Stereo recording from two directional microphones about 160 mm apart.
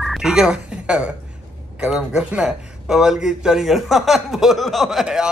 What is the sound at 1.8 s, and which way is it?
Speech, 5° right (ahead or behind).